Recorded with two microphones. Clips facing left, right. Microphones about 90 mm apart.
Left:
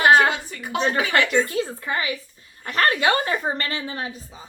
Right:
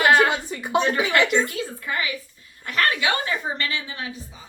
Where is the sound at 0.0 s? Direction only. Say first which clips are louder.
Left 2 dB; 25° left (ahead or behind).